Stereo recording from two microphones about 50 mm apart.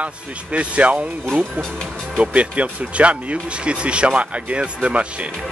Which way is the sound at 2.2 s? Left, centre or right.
Right.